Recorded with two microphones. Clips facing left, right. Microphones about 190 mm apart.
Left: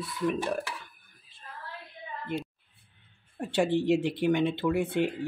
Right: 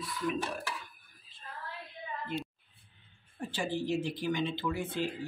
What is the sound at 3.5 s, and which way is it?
Speech, 70° left (ahead or behind).